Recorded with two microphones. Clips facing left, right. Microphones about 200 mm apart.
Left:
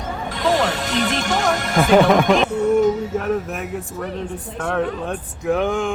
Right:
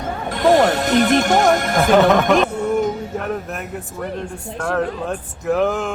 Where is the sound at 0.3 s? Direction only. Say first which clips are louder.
Right 6 dB; 55° right (ahead or behind).